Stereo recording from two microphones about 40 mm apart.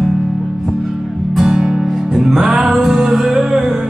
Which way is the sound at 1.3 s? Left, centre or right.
Centre.